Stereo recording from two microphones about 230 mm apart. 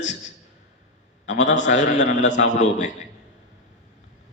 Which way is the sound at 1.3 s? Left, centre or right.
Left.